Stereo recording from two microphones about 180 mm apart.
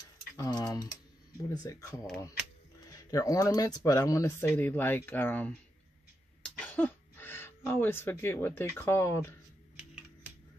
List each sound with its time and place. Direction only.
0.4 s speech: 20° left (ahead or behind)
6.4 s a sound: 10° left (ahead or behind)
8.7 s speech: 15° left (ahead or behind)